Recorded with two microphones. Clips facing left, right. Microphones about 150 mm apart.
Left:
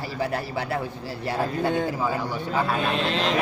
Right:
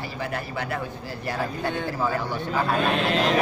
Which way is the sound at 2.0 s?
10° left (ahead or behind).